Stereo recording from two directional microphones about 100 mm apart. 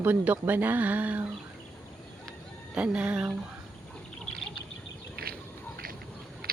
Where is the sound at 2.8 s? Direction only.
10° right (ahead or behind).